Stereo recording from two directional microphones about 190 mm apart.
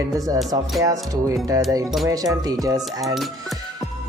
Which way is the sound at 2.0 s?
15° right (ahead or behind).